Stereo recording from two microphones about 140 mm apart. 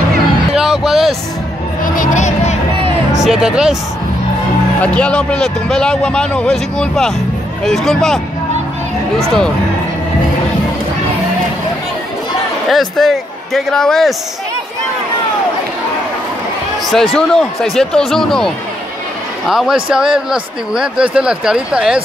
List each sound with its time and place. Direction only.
0.6 s a sound: centre (ahead or behind)
1.8 s a sound: 65° left (ahead or behind)
3.1 s music: 5° right (ahead or behind)
4.8 s speech: 10° left (ahead or behind)
12.6 s speech: centre (ahead or behind)
16.8 s speech: centre (ahead or behind)